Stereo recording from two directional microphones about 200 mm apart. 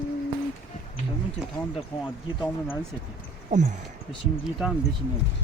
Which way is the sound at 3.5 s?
40° right (ahead or behind).